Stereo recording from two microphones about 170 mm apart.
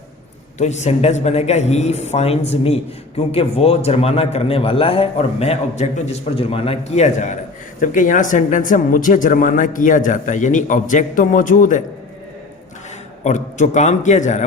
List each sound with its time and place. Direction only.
0.6 s a man's voice: 40° left (ahead or behind)
13.2 s speech: 45° left (ahead or behind)